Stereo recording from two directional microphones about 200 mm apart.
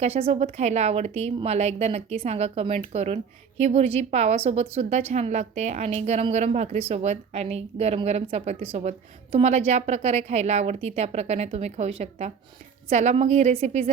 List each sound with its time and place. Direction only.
0.0 s a woman's voice: 30° right (ahead or behind)